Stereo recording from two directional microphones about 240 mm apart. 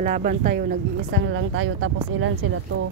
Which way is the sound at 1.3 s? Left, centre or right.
Right.